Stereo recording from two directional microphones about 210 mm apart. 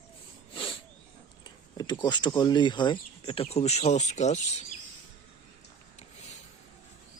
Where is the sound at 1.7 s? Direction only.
20° left (ahead or behind).